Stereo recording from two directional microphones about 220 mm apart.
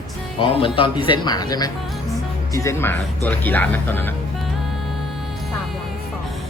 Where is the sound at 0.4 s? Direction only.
25° left (ahead or behind).